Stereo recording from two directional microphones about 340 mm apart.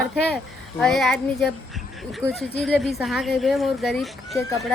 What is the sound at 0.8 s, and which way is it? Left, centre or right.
Speech, centre.